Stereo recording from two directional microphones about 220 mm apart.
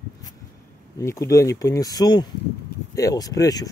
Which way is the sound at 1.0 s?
15° left (ahead or behind).